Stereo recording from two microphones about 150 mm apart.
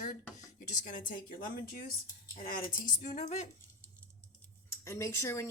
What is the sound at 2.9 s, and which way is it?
Speech, 50° left (ahead or behind).